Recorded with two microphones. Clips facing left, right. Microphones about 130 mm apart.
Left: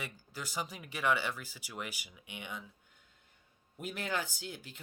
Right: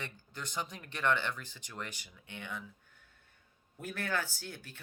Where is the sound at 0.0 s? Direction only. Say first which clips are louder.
Left 1 dB; 5° left (ahead or behind).